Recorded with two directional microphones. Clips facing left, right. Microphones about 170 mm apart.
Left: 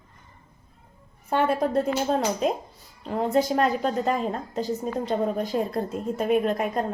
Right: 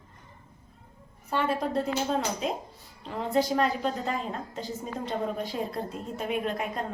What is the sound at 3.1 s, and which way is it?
A woman's voice, 45° left (ahead or behind).